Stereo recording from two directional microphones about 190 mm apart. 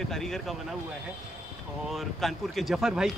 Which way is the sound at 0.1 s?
Centre (ahead or behind).